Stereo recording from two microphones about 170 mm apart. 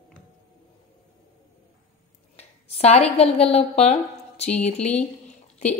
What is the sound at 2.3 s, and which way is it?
A woman's voice, 35° left (ahead or behind).